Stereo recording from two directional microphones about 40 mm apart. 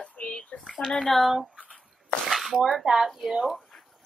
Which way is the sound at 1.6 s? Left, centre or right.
Left.